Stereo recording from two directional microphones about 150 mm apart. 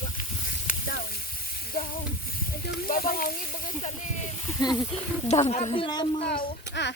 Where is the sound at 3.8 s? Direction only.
50° left (ahead or behind).